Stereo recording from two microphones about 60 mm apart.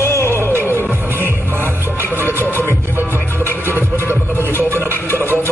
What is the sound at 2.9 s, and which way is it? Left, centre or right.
Music, right.